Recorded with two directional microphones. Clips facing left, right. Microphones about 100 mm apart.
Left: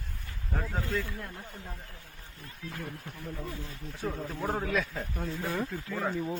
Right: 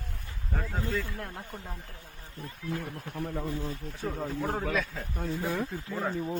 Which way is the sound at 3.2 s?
60° right (ahead or behind).